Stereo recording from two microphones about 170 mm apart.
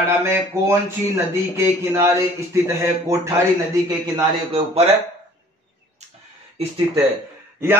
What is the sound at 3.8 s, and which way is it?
A man's voice, 25° right (ahead or behind).